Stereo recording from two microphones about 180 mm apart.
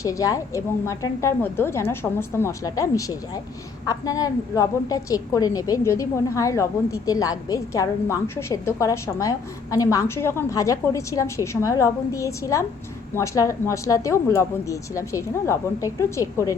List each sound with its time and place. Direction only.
0.0 s a woman's voice: 20° left (ahead or behind)